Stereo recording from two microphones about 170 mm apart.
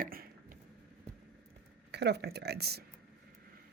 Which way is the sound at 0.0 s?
55° right (ahead or behind).